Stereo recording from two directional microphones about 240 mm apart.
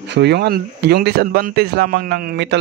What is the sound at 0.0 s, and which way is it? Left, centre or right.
A man's voice, right.